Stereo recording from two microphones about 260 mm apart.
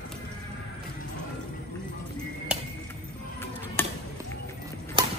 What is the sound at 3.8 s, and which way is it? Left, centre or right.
Chop, centre.